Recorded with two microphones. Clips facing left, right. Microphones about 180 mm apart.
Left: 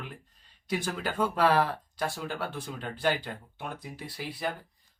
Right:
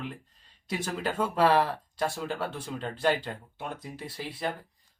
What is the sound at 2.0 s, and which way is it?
Speech, 25° right (ahead or behind).